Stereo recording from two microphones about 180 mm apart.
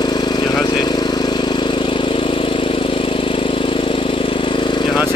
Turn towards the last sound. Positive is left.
turn(degrees=25)  # may be behind; listen again after turning